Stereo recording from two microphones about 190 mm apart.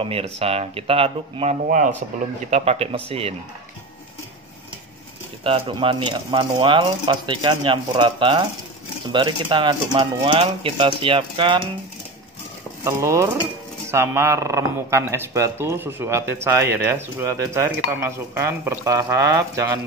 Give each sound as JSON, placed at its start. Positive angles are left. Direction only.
{"t": 0.0, "sound": "speech", "side_deg": -30}
{"t": 5.4, "sound": "speech", "side_deg": -30}
{"t": 12.8, "sound": "speech", "side_deg": -15}